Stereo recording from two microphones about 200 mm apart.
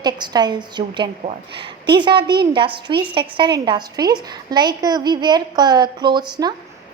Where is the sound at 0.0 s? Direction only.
20° right (ahead or behind).